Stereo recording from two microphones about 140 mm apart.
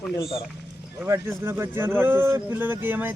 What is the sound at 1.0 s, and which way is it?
Speech, 15° right (ahead or behind).